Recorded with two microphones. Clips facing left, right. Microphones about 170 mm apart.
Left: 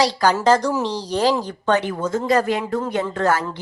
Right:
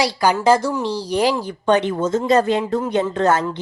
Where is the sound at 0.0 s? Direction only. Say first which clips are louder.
Even; 10° right (ahead or behind).